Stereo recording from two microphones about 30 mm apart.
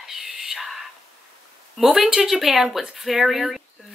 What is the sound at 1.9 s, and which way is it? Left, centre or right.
A woman's voice, centre.